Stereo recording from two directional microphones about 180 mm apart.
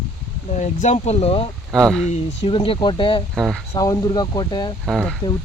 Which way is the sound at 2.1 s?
30° left (ahead or behind).